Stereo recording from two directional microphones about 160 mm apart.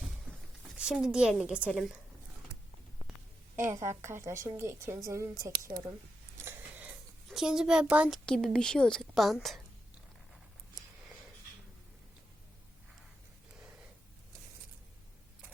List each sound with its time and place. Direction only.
0.7 s a woman's voice: 5° right (ahead or behind)
3.5 s a woman's voice: 15° right (ahead or behind)
6.3 s a sound: 15° right (ahead or behind)
7.3 s a woman's voice: 5° right (ahead or behind)
8.3 s a woman's voice: 5° left (ahead or behind)